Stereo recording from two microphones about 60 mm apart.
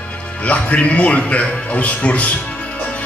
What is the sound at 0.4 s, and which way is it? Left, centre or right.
Speech, left.